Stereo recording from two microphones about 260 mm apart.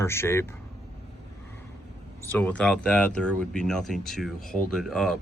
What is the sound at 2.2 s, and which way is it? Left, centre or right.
Speech, centre.